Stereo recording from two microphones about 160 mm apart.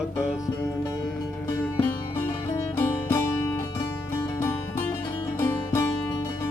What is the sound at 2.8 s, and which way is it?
Music, 15° left (ahead or behind).